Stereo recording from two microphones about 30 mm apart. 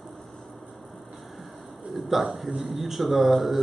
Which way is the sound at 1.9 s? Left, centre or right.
Centre.